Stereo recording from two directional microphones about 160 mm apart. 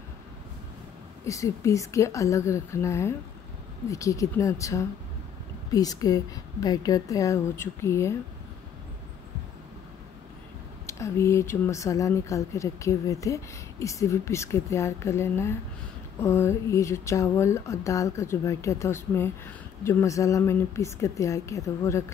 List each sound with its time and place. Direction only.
1.2 s a woman's voice: 20° left (ahead or behind)
10.9 s a woman's voice: 15° left (ahead or behind)